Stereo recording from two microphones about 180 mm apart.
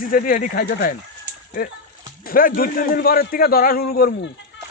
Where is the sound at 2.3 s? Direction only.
50° left (ahead or behind).